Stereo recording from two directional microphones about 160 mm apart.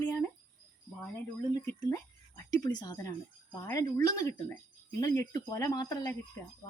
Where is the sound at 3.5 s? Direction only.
15° left (ahead or behind).